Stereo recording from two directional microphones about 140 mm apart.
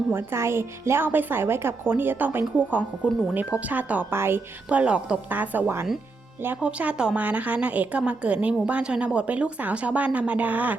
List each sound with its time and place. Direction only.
0.1 s a woman's voice: 15° right (ahead or behind)